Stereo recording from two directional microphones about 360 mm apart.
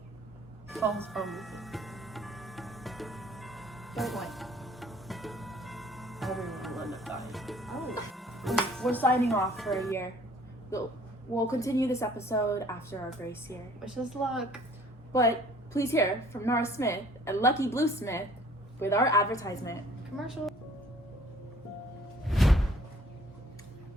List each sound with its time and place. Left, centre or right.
0.7 s music: centre
11.3 s a woman's voice: centre
22.3 s music: centre